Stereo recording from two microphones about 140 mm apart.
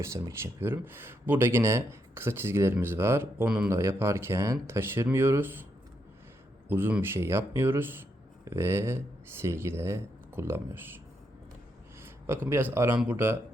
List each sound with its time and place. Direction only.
0.0 s speech: 20° right (ahead or behind)
6.7 s speech: 15° right (ahead or behind)
12.0 s a man's voice: 15° right (ahead or behind)